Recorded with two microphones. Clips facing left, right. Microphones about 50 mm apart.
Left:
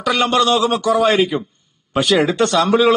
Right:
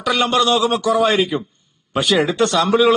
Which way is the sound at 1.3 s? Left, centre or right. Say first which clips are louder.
Left 1 dB; centre.